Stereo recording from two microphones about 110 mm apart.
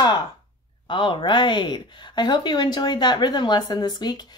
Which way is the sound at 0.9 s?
50° left (ahead or behind).